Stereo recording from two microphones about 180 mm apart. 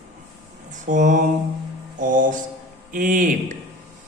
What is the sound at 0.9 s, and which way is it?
A man's voice, 45° right (ahead or behind).